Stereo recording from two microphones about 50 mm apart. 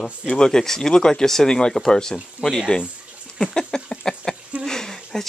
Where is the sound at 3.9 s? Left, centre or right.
Centre.